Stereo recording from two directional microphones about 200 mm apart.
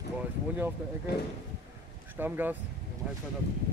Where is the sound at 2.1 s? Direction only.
10° right (ahead or behind).